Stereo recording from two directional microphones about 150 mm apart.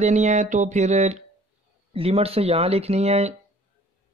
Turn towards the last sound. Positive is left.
turn(degrees=-45)  # may be behind; listen again after turning